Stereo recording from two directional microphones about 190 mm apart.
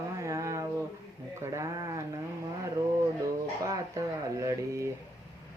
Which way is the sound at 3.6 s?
20° right (ahead or behind).